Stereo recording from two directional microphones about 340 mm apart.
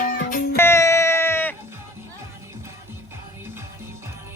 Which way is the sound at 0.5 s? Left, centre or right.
Centre.